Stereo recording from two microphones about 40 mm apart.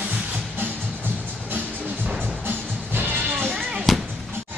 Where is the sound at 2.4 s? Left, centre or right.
Right.